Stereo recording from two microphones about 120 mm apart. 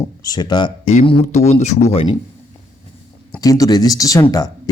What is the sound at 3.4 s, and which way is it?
Speech, 30° left (ahead or behind).